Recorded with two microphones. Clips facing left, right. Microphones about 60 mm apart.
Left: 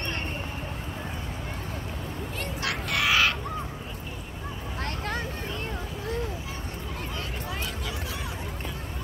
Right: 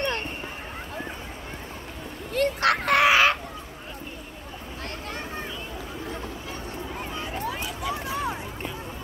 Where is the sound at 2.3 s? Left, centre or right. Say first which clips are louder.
Right 11 dB; right.